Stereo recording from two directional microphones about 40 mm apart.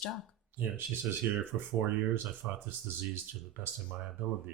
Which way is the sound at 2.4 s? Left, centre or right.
Right.